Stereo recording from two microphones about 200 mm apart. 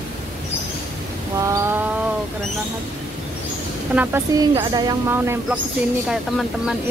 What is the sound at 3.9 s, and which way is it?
Speech, 10° right (ahead or behind).